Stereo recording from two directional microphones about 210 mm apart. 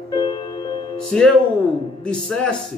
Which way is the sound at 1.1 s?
5° left (ahead or behind).